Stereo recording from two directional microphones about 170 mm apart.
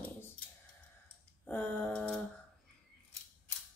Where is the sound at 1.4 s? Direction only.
10° left (ahead or behind).